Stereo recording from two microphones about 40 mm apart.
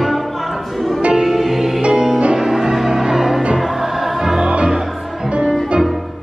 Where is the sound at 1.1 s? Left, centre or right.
Centre.